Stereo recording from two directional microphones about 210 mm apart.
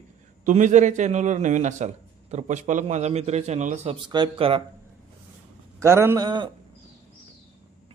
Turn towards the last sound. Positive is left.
turn(degrees=-20)  # may be behind; listen again after turning